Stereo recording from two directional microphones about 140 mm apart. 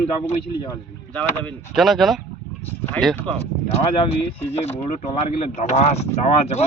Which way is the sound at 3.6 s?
45° left (ahead or behind).